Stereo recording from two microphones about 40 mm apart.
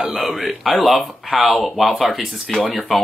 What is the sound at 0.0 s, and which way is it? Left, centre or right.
Speech, right.